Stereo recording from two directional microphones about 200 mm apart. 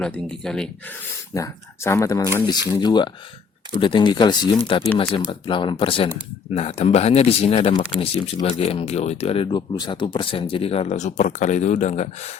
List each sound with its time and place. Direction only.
0.0 s speech: 5° left (ahead or behind)
1.3 s speech: 15° left (ahead or behind); by 12.4 s 35° left (ahead or behind)